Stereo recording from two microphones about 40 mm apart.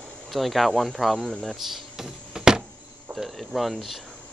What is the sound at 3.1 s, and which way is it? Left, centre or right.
Speech, centre.